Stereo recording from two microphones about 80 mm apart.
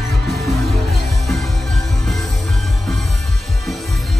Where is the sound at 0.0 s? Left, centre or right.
Centre.